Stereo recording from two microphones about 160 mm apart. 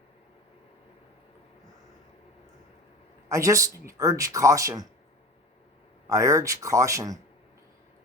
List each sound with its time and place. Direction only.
3.2 s speech: 20° right (ahead or behind)
6.1 s speech: 20° right (ahead or behind)